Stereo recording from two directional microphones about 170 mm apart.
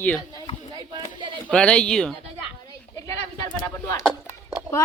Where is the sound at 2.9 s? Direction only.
20° left (ahead or behind).